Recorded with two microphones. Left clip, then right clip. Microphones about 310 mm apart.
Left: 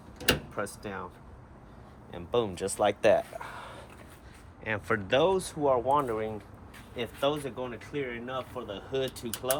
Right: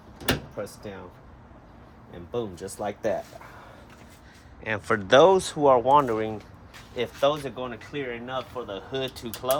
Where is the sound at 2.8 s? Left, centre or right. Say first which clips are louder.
Left 5 dB; left.